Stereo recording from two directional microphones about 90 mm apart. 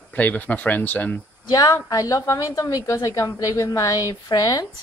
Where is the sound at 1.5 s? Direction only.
45° left (ahead or behind).